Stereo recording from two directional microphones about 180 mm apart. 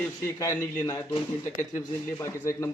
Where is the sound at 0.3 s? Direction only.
20° left (ahead or behind).